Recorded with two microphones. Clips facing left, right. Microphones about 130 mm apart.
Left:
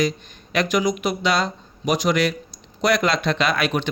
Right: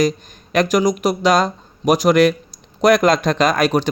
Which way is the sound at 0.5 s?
45° right (ahead or behind).